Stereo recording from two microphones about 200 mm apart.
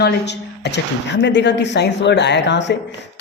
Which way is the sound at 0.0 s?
60° left (ahead or behind).